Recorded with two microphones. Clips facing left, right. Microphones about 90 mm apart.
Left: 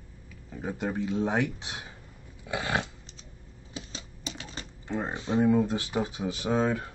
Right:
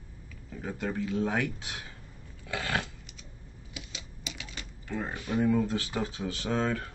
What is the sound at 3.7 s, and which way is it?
Speech, 35° left (ahead or behind).